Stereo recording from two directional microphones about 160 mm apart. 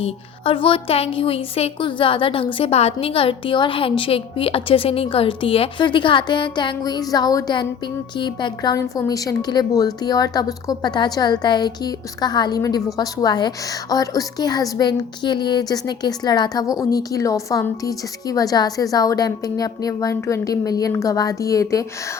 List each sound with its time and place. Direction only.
0.0 s a woman's voice: 35° left (ahead or behind)